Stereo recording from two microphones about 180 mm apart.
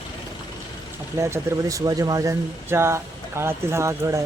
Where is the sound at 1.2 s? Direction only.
15° right (ahead or behind).